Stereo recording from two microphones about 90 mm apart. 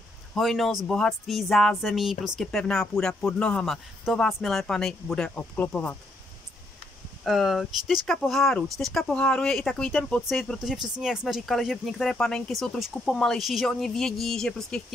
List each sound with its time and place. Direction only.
0.3 s speech: centre (ahead or behind)
2.4 s speech: 5° left (ahead or behind)
3.6 s speech: centre (ahead or behind); by 5.9 s 15° left (ahead or behind)
7.2 s speech: centre (ahead or behind)
10.6 s speech: 5° right (ahead or behind)